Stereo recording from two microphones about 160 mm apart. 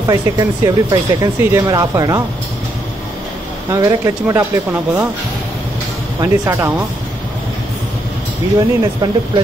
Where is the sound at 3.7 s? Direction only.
20° right (ahead or behind).